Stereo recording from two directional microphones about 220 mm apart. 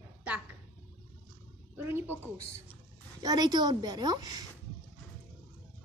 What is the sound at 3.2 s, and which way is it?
A woman's voice, 15° right (ahead or behind).